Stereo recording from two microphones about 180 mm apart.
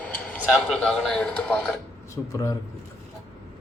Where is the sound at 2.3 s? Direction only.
20° left (ahead or behind).